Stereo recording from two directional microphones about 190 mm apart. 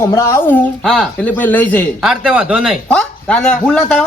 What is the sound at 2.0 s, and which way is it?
Speech, 5° right (ahead or behind).